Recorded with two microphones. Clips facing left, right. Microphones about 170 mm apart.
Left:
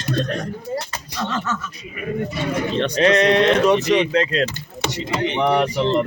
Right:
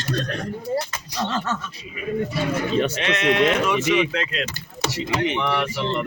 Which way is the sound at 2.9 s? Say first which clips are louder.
Left 6 dB; 35° left (ahead or behind).